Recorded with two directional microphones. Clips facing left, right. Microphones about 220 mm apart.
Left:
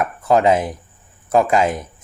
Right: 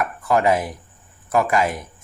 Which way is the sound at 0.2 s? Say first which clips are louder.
Left 4 dB; 20° left (ahead or behind).